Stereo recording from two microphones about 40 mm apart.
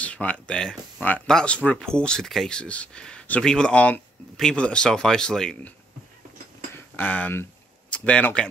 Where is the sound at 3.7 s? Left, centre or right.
Left.